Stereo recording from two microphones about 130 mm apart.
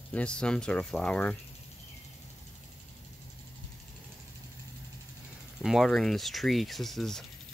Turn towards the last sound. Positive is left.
turn(degrees=0)  # may be behind; listen again after turning